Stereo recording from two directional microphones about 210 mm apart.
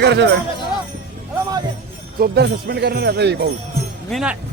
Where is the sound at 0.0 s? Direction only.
55° right (ahead or behind).